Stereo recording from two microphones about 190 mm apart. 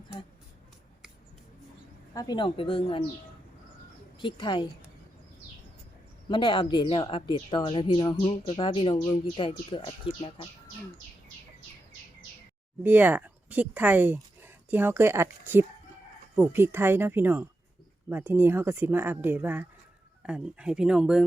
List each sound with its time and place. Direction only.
2.1 s speech: 20° left (ahead or behind)
4.2 s speech: 25° left (ahead or behind)
6.2 s speech: 25° left (ahead or behind)
12.8 s speech: 10° right (ahead or behind)